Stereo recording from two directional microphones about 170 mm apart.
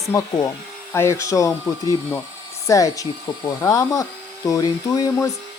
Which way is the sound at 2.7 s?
20° left (ahead or behind).